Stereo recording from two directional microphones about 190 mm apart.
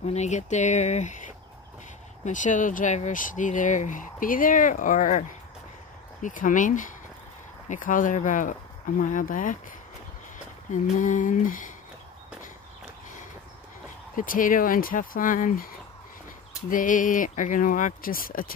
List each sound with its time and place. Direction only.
0.0 s speech: 35° left (ahead or behind)
6.2 s speech: 45° left (ahead or behind)
10.7 s speech: 40° left (ahead or behind)
14.1 s speech: 45° left (ahead or behind)